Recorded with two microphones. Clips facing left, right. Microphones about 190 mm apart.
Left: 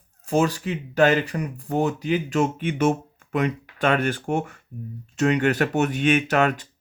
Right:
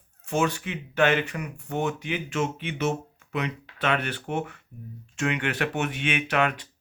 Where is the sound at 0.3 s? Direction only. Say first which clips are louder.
Left 4 dB; 35° left (ahead or behind).